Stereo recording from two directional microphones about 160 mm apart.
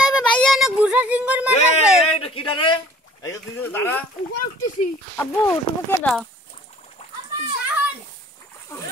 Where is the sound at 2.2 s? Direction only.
35° left (ahead or behind).